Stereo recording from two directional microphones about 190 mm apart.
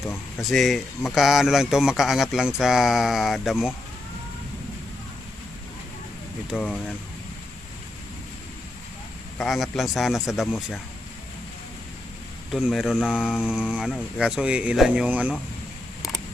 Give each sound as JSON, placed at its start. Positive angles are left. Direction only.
{"t": 0.0, "sound": "speech", "side_deg": 15}
{"t": 0.4, "sound": "a man's voice", "side_deg": 0}
{"t": 6.6, "sound": "speech", "side_deg": 10}
{"t": 9.4, "sound": "a man's voice", "side_deg": 0}
{"t": 12.5, "sound": "a man's voice", "side_deg": 0}